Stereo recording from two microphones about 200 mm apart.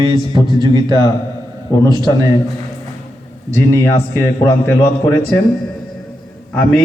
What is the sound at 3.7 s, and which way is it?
Speech, 15° left (ahead or behind).